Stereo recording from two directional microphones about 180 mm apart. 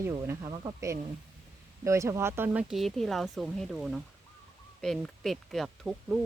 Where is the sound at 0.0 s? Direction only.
15° right (ahead or behind).